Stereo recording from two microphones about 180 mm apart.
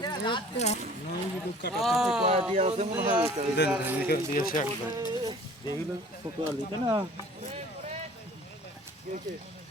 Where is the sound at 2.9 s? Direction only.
10° right (ahead or behind).